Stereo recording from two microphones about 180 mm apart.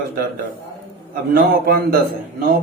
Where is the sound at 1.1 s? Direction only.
55° right (ahead or behind).